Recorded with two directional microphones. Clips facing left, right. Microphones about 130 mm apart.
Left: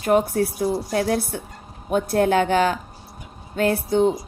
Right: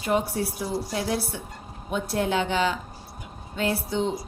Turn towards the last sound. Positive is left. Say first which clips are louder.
# left 7 dB
turn(degrees=50)  # may be behind; listen again after turning